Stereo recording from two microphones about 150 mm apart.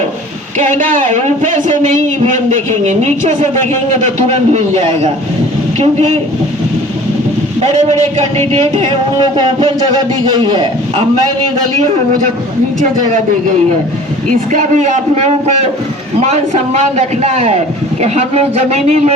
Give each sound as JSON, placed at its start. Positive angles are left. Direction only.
{"t": 0.8, "sound": "a man's voice", "side_deg": -60}
{"t": 7.7, "sound": "a man's voice", "side_deg": -50}
{"t": 10.3, "sound": "a man's voice", "side_deg": -30}
{"t": 14.5, "sound": "a man's voice", "side_deg": -55}